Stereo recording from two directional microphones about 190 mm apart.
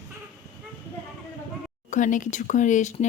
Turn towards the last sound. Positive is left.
turn(degrees=40)  # may be behind; listen again after turning